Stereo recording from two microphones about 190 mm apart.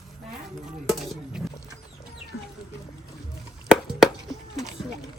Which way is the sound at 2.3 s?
90° left.